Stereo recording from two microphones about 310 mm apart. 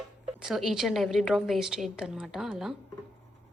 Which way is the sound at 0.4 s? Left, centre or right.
Centre.